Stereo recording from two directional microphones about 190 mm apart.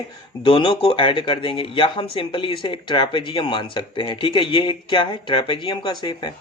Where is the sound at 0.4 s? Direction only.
30° left (ahead or behind).